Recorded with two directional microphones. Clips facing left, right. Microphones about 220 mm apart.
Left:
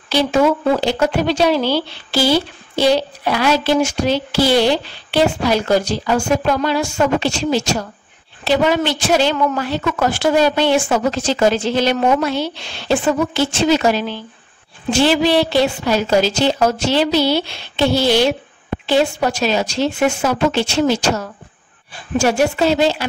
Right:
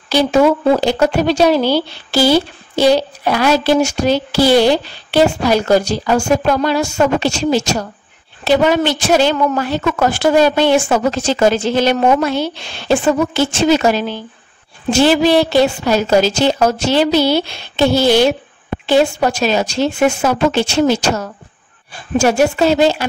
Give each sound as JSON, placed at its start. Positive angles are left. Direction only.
{"t": 0.1, "sound": "a woman's voice", "side_deg": -40}